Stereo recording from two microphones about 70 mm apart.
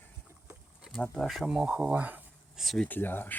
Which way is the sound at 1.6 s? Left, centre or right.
Centre.